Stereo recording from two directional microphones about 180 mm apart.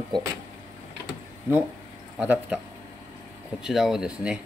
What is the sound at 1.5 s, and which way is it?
Speech, 10° right (ahead or behind).